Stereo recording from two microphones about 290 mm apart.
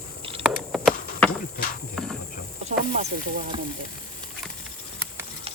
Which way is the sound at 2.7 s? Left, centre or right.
Right.